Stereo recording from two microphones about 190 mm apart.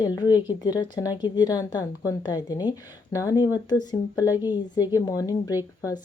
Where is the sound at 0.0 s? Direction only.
20° left (ahead or behind).